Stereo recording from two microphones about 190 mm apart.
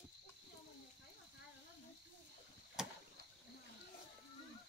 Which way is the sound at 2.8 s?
5° right (ahead or behind).